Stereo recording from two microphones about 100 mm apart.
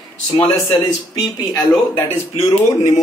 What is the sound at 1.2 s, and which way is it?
Speech, 45° left (ahead or behind).